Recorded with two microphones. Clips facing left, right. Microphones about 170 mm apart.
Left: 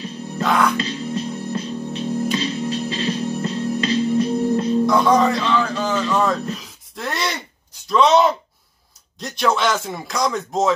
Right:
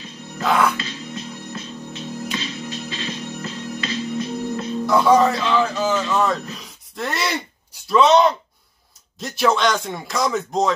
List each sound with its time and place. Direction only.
0.4 s music: 5° right (ahead or behind)
0.7 s music: 35° left (ahead or behind)
4.8 s speech: 5° right (ahead or behind)